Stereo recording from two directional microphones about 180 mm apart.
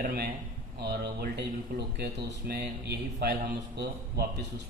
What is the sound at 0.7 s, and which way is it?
Speech, 65° right (ahead or behind).